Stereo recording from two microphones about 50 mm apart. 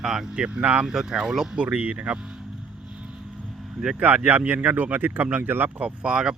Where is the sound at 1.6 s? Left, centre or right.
Right.